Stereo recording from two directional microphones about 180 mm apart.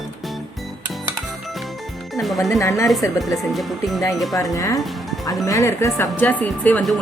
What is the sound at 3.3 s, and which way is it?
Speech, centre (ahead or behind).